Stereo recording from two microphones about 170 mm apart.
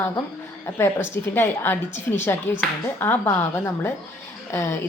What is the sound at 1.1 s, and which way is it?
Speech, 15° left (ahead or behind).